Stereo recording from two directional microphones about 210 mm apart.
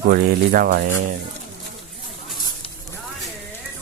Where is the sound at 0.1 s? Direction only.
45° right (ahead or behind).